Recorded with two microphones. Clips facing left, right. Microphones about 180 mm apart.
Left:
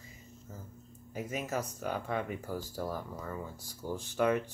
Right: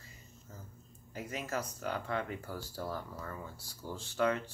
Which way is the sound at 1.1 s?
15° left (ahead or behind).